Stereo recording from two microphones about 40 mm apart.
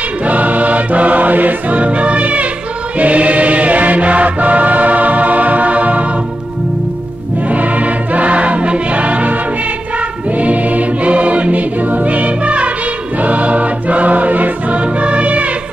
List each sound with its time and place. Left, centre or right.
0.2 s music: right
7.5 s music: right
10.3 s choir: right
13.2 s music: right